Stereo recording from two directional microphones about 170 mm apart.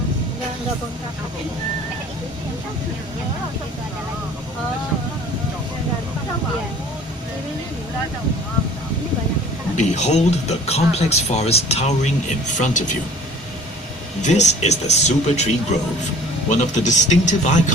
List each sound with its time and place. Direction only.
9.7 s speech: 45° left (ahead or behind)
14.2 s speech: 45° left (ahead or behind)
16.5 s speech: 45° left (ahead or behind)